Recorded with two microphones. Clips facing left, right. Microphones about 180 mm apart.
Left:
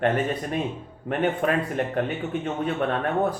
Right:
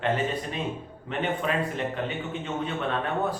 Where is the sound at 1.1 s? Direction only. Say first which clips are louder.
Left 5 dB; 50° left (ahead or behind).